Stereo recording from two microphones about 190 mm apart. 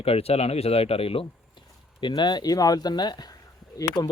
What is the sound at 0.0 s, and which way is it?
A man's voice, 30° left (ahead or behind).